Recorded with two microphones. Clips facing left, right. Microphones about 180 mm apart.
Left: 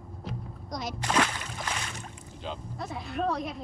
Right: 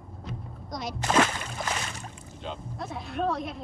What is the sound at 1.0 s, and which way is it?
Speech, 45° right (ahead or behind).